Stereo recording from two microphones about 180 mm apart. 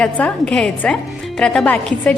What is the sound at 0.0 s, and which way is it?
A woman's voice, 5° left (ahead or behind).